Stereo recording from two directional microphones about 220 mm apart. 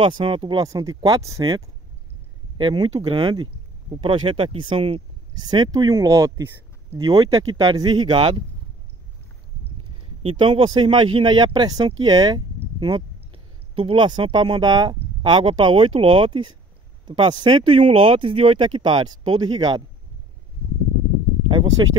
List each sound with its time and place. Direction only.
0.2 s speech: 25° right (ahead or behind)
10.2 s speech: 20° right (ahead or behind)
21.5 s a sound: 20° right (ahead or behind)